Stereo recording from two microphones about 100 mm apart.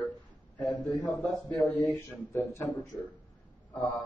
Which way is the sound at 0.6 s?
15° left (ahead or behind).